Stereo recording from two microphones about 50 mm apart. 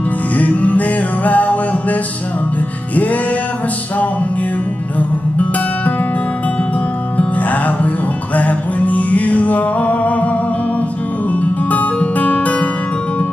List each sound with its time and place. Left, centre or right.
0.4 s music: left
4.9 s music: left
7.2 s music: left
11.7 s music: left